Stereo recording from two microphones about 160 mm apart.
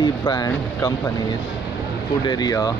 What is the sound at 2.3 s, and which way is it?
Speech, 25° left (ahead or behind).